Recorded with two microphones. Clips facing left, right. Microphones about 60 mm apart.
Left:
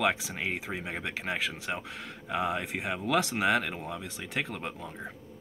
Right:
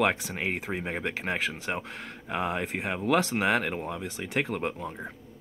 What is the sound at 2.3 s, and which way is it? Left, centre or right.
Speech, right.